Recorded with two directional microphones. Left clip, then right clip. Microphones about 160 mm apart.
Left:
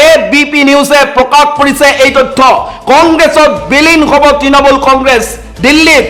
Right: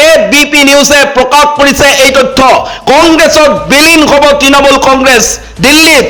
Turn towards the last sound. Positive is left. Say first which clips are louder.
# right 1 dB
turn(degrees=-30)  # may be behind; listen again after turning